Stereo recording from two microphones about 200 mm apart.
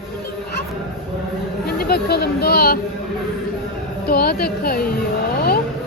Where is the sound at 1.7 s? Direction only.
50° left (ahead or behind).